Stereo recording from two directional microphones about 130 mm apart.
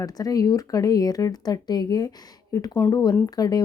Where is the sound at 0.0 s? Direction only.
30° left (ahead or behind).